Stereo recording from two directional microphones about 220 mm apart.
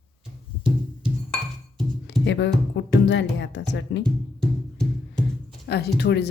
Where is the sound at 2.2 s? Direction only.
55° left (ahead or behind).